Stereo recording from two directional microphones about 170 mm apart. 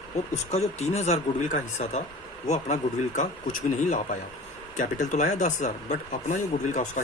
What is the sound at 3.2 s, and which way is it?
Speech, 50° left (ahead or behind).